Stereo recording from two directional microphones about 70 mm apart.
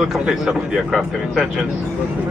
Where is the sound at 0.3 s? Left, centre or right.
Centre.